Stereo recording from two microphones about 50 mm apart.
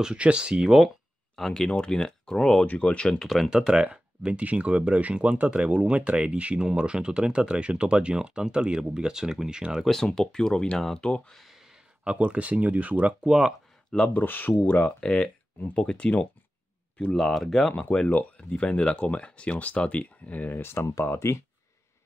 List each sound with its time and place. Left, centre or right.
0.0 s speech: right
1.3 s speech: centre
1.7 s speech: centre
2.6 s speech: left
3.2 s speech: centre
3.7 s speech: right
9.8 s speech: centre
11.3 s a sound: centre
12.0 s speech: right
14.1 s speech: left
15.0 s speech: centre
17.1 s speech: centre
18.5 s speech: left
21.2 s speech: left